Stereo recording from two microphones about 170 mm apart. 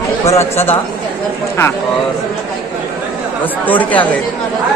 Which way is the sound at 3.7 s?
10° left (ahead or behind).